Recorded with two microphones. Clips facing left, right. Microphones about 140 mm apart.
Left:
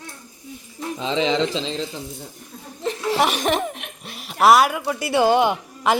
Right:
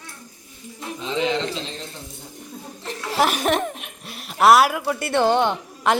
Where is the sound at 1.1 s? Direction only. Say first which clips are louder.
Left 3 dB; 90° left.